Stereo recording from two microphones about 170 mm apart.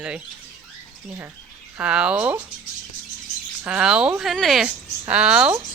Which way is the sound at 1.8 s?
5° right (ahead or behind).